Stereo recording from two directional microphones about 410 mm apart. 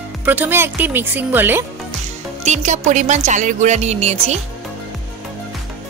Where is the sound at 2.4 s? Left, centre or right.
Centre.